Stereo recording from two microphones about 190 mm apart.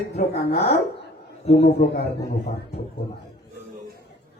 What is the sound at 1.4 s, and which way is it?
Speech, 35° left (ahead or behind).